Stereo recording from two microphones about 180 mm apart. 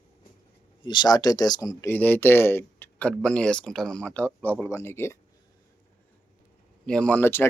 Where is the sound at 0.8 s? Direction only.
25° left (ahead or behind).